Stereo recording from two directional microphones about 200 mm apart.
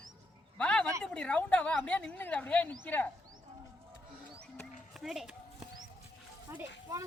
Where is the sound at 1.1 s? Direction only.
5° left (ahead or behind).